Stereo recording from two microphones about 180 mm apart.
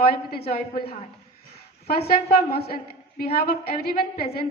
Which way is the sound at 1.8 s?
60° left (ahead or behind).